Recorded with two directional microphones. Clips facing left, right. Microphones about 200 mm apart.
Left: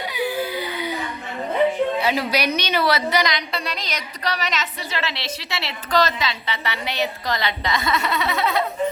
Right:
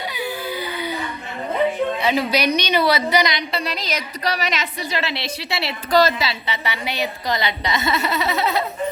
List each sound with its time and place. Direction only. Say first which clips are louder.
0.1 s baby cry: left 6 dB; 15° left (ahead or behind)
2.0 s a woman's voice: right 2 dB; 5° left (ahead or behind)